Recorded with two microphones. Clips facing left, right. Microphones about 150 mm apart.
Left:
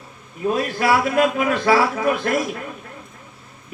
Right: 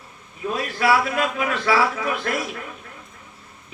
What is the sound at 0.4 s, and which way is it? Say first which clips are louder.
A man's voice: left 2 dB; 40° left (ahead or behind).